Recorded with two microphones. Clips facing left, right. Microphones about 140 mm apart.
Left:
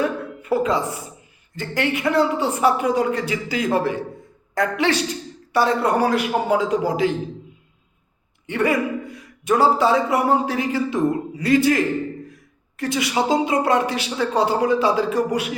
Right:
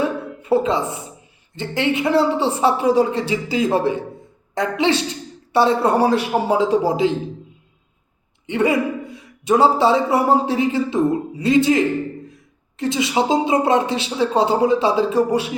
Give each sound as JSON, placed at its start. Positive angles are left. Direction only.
{"t": 0.0, "sound": "a sound", "side_deg": -25}
{"t": 1.5, "sound": "a man's voice", "side_deg": -25}
{"t": 8.4, "sound": "a man's voice", "side_deg": -20}